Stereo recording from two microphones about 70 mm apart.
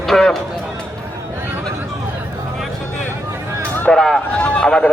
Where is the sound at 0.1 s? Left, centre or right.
Centre.